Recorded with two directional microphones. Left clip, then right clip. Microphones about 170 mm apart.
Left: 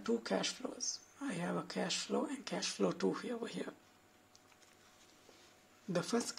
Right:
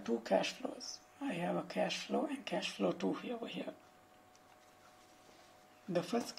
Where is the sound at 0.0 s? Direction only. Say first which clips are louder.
Right 2 dB; 20° left (ahead or behind).